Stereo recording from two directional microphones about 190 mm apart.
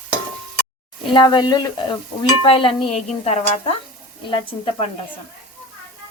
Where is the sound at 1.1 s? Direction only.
25° left (ahead or behind).